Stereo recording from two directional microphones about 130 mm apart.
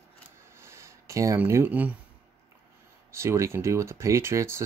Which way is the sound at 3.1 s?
20° right (ahead or behind).